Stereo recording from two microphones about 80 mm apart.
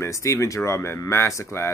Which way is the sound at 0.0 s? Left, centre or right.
Left.